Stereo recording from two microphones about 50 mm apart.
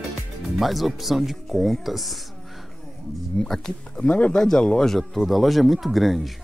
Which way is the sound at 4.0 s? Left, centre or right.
Left.